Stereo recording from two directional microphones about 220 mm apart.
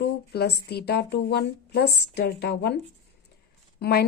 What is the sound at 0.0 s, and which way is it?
A woman's voice, 50° left (ahead or behind).